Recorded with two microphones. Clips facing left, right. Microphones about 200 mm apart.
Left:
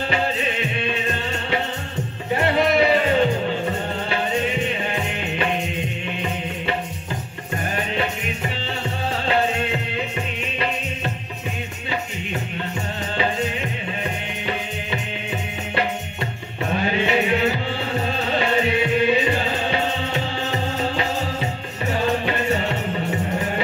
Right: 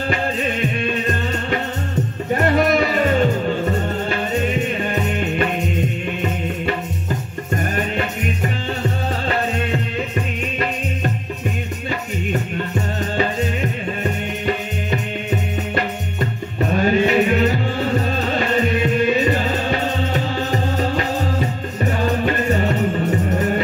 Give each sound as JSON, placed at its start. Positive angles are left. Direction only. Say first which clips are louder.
{"t": 2.4, "sound": "a sound", "louder": "right 1 dB", "side_deg": -45}
{"t": 4.9, "sound": "music", "louder": "right 5 dB", "side_deg": -45}
{"t": 13.2, "sound": "music", "louder": "right 2 dB", "side_deg": -45}
{"t": 18.8, "sound": "music", "louder": "right 2 dB", "side_deg": -45}